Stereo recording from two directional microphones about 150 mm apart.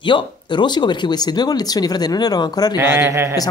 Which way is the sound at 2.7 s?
15° right (ahead or behind).